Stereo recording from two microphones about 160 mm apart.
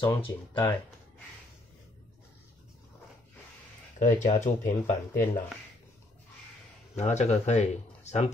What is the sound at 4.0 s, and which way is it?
Speech, 50° left (ahead or behind).